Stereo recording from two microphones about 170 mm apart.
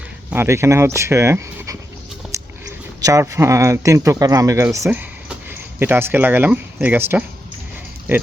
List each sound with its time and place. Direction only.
0.3 s speech: 15° right (ahead or behind)
2.2 s a sound: centre (ahead or behind)
3.0 s speech: 20° right (ahead or behind)